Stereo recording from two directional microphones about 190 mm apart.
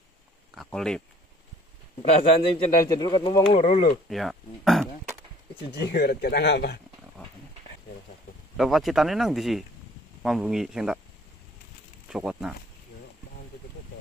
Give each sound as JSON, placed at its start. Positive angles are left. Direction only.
{"t": 0.6, "sound": "a sound", "side_deg": 5}
{"t": 2.5, "sound": "speech", "side_deg": 20}
{"t": 4.1, "sound": "speech", "side_deg": 0}
{"t": 5.8, "sound": "speech", "side_deg": 55}
{"t": 8.5, "sound": "speech", "side_deg": 0}
{"t": 12.1, "sound": "speech", "side_deg": -5}